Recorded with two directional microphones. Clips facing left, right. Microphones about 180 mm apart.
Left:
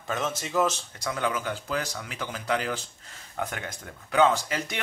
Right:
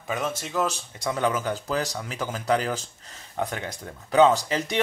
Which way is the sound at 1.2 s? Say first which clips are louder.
Right 4 dB; 40° right (ahead or behind).